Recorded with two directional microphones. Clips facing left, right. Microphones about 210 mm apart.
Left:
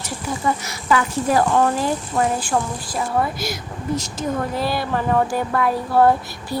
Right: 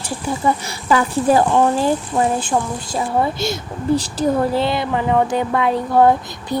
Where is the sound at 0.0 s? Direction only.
30° right (ahead or behind).